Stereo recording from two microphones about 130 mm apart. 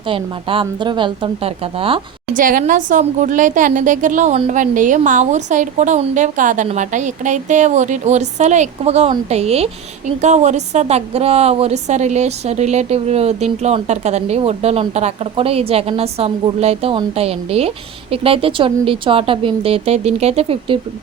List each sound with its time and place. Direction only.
0.1 s speech: 40° right (ahead or behind)
2.3 s a woman's voice: 90° right; by 9.6 s 55° right (ahead or behind)
10.2 s a woman's voice: 65° right (ahead or behind)